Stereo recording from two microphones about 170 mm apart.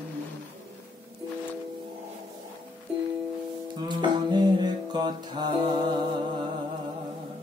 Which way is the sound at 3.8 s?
25° right (ahead or behind).